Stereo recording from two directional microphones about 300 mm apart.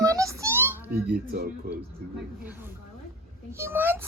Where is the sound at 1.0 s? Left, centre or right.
Right.